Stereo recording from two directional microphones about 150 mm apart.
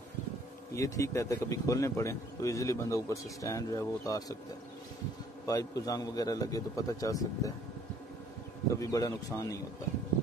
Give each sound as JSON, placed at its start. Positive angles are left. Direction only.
{"t": 0.7, "sound": "speech", "side_deg": 20}
{"t": 5.5, "sound": "speech", "side_deg": 25}
{"t": 8.7, "sound": "speech", "side_deg": 20}